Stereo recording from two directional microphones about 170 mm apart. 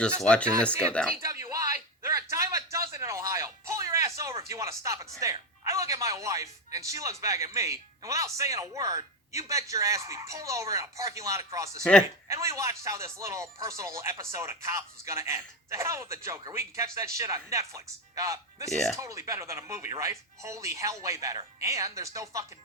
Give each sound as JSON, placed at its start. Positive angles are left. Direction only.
{"t": 0.2, "sound": "speech", "side_deg": 5}
{"t": 1.2, "sound": "a sound", "side_deg": -20}
{"t": 2.3, "sound": "music", "side_deg": -20}
{"t": 5.2, "sound": "speech", "side_deg": -20}
{"t": 11.8, "sound": "speech", "side_deg": 5}
{"t": 12.3, "sound": "speech", "side_deg": -20}